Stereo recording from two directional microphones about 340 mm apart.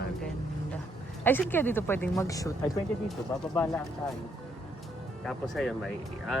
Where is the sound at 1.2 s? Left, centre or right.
Centre.